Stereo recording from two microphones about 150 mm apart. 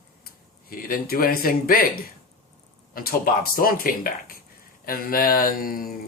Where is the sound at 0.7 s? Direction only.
75° left (ahead or behind).